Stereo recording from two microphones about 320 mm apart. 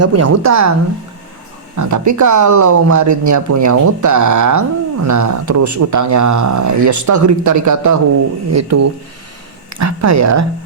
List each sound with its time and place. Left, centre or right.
0.0 s speech: right
1.7 s speech: right